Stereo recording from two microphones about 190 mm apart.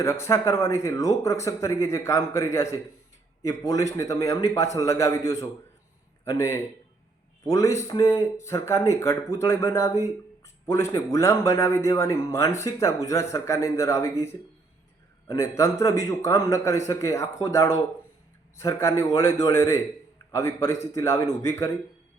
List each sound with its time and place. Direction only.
0.0 s a man's voice: 15° left (ahead or behind)